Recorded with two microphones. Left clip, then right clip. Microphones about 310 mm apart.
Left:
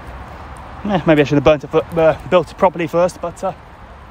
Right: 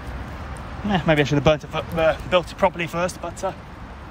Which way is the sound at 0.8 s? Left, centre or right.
Left.